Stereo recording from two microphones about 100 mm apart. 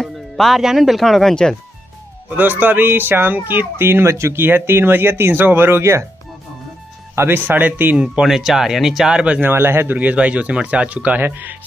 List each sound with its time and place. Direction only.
0.0 s speech: centre (ahead or behind)
2.2 s a man's voice: 15° right (ahead or behind)
7.2 s speech: 20° right (ahead or behind)
8.1 s speech: 5° right (ahead or behind)